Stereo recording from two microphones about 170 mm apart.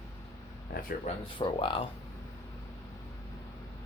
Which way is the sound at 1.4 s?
30° left (ahead or behind).